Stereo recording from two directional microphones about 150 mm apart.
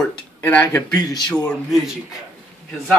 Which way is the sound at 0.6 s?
25° left (ahead or behind).